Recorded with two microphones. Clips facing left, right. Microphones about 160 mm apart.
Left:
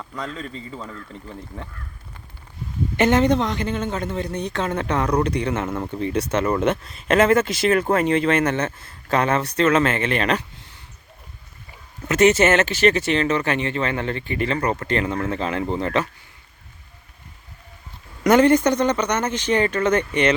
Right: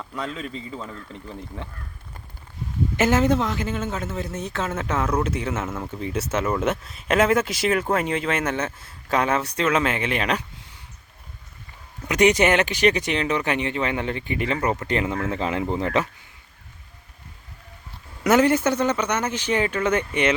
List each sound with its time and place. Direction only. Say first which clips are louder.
0.0 s a man's voice: even; 5° right (ahead or behind)
3.0 s a man's voice: left 2 dB; 5° right (ahead or behind)
12.0 s speech: left 2 dB; 15° right (ahead or behind)
18.2 s speech: left 3 dB; 5° right (ahead or behind)